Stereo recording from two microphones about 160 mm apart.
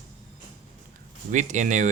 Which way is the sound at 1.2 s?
50° right (ahead or behind).